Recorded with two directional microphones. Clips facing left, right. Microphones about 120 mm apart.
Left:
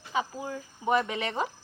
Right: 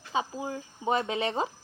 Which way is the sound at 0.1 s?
25° right (ahead or behind).